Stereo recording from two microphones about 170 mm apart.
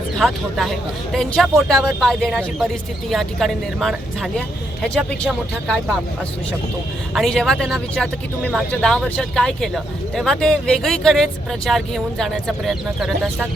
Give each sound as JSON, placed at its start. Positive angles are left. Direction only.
{"t": 0.2, "sound": "speech", "side_deg": 0}
{"t": 7.1, "sound": "speech", "side_deg": 0}